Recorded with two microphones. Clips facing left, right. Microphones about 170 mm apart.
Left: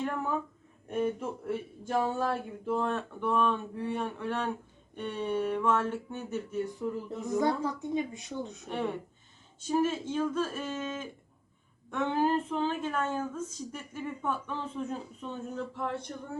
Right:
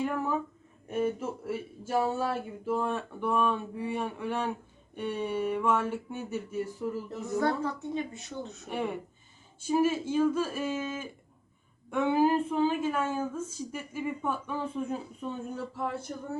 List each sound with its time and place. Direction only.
0.0 s a woman's voice: 5° right (ahead or behind)
7.3 s a woman's voice: 15° left (ahead or behind)
8.7 s a woman's voice: 10° right (ahead or behind)